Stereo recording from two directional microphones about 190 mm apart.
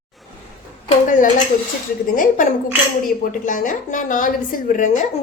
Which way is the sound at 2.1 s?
45° left (ahead or behind).